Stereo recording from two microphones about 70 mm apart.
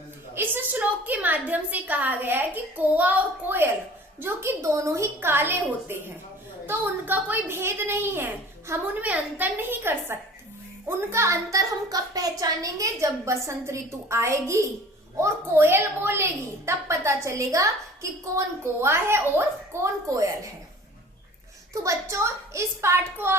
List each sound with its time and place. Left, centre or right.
0.3 s a woman's voice: right
5.2 s a woman's voice: right
9.0 s a woman's voice: right
10.8 s a woman's voice: right
21.8 s a woman's voice: right